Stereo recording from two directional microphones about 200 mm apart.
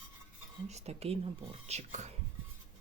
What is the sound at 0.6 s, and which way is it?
Speech, 30° right (ahead or behind).